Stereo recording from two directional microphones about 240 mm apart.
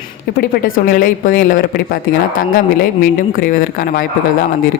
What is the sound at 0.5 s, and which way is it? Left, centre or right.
Speech, left.